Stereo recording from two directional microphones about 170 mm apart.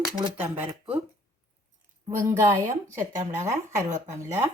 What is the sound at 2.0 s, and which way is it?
Speech, 15° right (ahead or behind).